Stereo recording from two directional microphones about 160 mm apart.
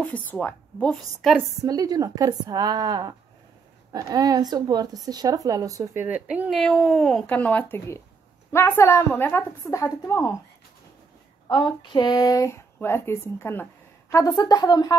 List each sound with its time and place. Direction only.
0.0 s a woman's voice: 10° left (ahead or behind)
1.6 s speech: 25° right (ahead or behind)
6.0 s a woman's voice: 10° right (ahead or behind)
6.6 s a woman's voice: 5° left (ahead or behind); by 10.3 s 20° left (ahead or behind)
11.4 s speech: 25° left (ahead or behind)